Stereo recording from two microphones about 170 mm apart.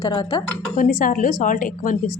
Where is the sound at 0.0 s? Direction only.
30° left (ahead or behind).